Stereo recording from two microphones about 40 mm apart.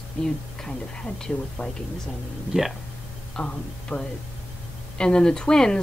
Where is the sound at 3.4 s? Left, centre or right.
Left.